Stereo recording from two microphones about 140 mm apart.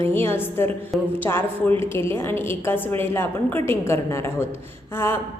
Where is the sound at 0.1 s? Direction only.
15° left (ahead or behind).